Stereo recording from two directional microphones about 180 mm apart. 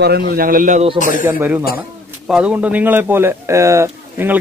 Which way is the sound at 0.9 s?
45° left (ahead or behind).